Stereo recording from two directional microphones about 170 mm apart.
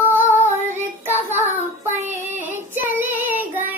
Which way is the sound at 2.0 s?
45° right (ahead or behind).